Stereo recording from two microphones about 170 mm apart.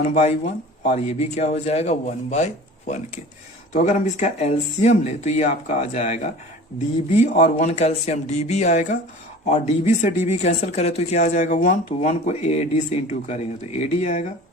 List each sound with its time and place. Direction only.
0.0 s speech: 40° left (ahead or behind)